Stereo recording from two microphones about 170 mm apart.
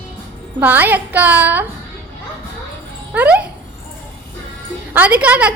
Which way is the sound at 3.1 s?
10° right (ahead or behind).